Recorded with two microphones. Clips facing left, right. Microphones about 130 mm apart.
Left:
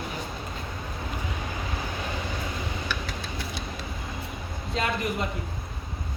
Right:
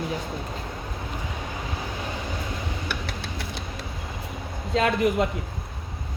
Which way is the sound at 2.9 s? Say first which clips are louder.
Right 1 dB; 70° right (ahead or behind).